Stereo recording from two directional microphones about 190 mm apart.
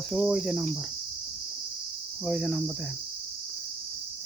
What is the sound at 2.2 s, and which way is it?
Cricket, 5° right (ahead or behind).